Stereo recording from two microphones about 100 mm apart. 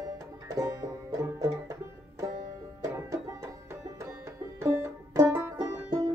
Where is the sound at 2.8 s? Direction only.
30° right (ahead or behind).